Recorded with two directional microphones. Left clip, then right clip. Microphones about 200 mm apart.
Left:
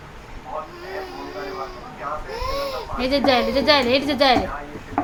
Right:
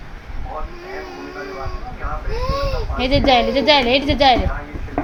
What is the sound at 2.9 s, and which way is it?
A woman's voice, 5° right (ahead or behind).